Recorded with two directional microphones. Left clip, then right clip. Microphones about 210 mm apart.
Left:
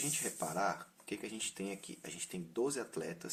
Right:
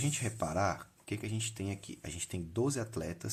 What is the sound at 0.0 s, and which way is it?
Speech, 35° right (ahead or behind).